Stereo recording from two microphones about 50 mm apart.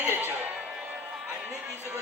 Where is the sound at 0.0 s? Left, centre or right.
Right.